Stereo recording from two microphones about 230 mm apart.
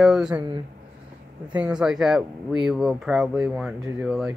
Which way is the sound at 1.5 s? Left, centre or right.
Centre.